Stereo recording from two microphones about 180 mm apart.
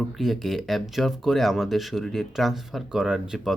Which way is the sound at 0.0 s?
Centre (ahead or behind).